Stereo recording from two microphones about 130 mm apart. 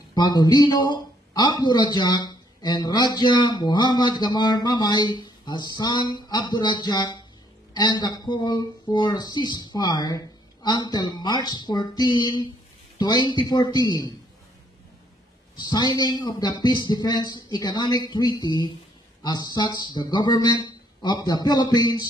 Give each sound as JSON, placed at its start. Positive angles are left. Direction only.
{"t": 0.1, "sound": "speech", "side_deg": 30}
{"t": 15.5, "sound": "speech", "side_deg": 30}